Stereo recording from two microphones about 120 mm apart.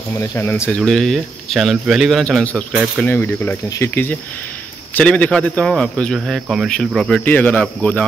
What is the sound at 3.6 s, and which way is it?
Speech, 30° left (ahead or behind).